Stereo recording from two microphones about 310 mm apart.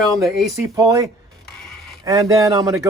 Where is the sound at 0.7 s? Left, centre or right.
Centre.